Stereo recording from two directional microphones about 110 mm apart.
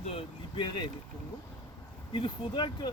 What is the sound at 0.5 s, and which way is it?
Speech, 40° left (ahead or behind).